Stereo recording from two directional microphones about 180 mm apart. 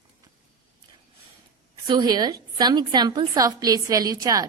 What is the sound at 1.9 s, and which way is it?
A woman's voice, 25° right (ahead or behind).